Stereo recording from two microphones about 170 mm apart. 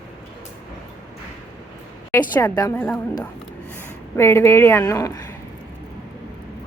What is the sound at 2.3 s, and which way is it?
Speech, 20° left (ahead or behind).